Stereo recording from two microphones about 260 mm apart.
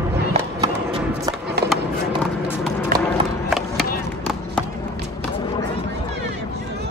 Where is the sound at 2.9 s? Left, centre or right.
Right.